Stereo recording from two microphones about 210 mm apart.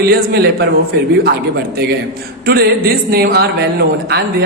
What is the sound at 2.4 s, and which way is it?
A man's voice, 50° right (ahead or behind).